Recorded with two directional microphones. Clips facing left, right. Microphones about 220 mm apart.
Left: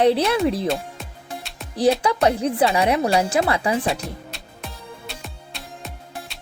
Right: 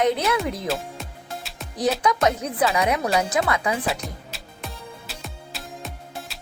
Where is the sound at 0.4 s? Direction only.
30° left (ahead or behind).